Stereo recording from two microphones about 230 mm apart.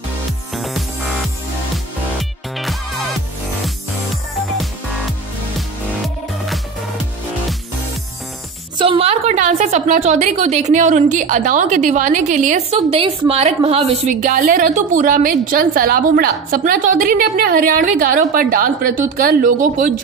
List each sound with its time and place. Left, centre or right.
0.6 s music: centre
2.1 s music: centre
6.0 s music: centre
8.7 s a woman's voice: right